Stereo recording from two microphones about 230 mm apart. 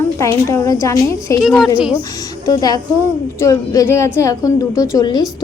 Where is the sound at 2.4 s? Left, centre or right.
Centre.